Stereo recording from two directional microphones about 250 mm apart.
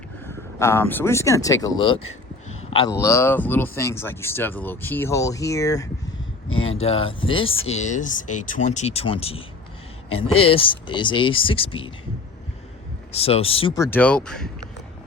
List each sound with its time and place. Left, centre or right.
0.3 s speech: centre
2.5 s a sound: left
2.9 s speech: centre
6.5 s speech: left
6.8 s speech: left
10.4 s speech: left
13.1 s speech: left; by 14.5 s centre